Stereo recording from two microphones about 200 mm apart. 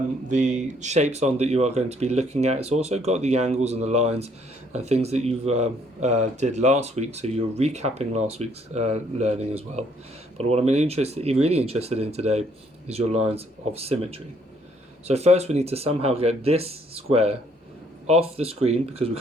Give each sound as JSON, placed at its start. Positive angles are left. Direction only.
{"t": 0.3, "sound": "speech", "side_deg": -40}